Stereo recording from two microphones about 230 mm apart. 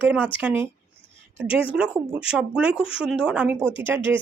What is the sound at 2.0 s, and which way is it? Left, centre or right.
A woman's voice, centre.